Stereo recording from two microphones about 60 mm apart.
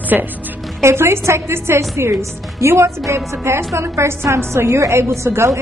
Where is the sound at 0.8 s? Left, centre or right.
Right.